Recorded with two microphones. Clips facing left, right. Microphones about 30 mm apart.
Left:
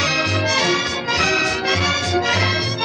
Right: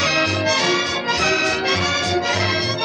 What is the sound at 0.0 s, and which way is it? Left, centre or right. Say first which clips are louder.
Music: right 1 dB; centre.